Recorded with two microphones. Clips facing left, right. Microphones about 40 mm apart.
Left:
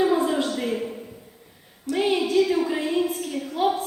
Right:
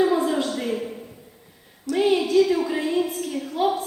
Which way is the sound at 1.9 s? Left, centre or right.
Centre.